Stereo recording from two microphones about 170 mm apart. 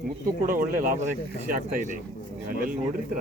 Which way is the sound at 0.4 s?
55° right (ahead or behind).